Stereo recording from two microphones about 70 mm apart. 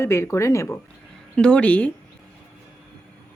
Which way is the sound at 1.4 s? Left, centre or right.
Centre.